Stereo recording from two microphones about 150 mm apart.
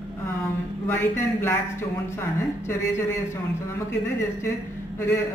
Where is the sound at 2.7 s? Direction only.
15° left (ahead or behind).